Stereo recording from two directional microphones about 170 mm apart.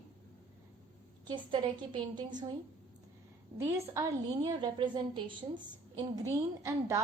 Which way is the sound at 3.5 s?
15° right (ahead or behind).